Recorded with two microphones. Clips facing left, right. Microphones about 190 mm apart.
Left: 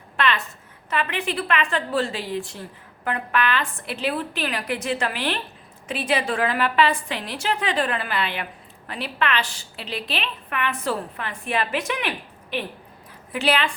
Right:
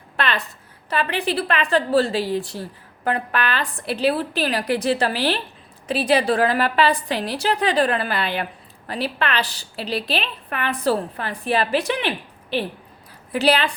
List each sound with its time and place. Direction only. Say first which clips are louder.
0.2 s a woman's voice: even; 35° right (ahead or behind)